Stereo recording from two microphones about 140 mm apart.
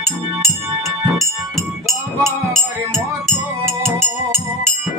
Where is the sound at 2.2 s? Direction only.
20° right (ahead or behind).